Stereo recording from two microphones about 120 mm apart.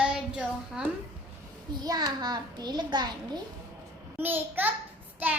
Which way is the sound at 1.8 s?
35° right (ahead or behind).